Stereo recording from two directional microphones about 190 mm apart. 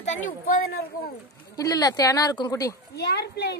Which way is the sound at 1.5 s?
20° left (ahead or behind).